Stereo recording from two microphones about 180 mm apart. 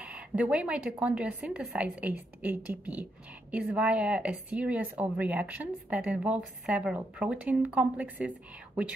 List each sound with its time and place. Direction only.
0.0 s speech: 5° right (ahead or behind)